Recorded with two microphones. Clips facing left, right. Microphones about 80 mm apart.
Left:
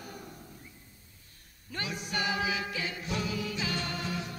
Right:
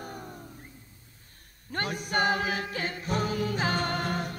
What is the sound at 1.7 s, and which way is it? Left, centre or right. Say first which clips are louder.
Music: right 6 dB; right.